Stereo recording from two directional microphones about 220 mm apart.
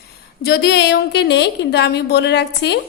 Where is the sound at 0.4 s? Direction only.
45° left (ahead or behind).